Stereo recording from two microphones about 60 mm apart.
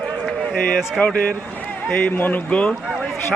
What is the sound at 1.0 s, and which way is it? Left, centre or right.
A man's voice, left.